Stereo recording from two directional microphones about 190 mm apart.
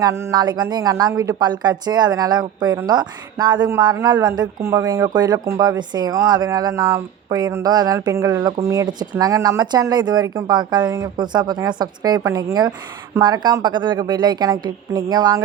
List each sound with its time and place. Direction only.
0.0 s speech: 15° right (ahead or behind)